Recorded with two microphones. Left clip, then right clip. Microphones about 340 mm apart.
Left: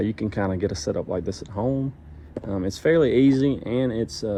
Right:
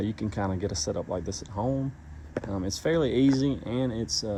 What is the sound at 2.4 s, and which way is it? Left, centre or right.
Speech, centre.